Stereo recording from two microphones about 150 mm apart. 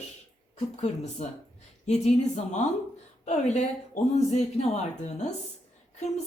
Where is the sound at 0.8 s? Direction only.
45° left (ahead or behind).